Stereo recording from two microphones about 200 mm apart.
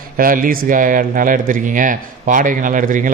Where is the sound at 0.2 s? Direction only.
45° right (ahead or behind).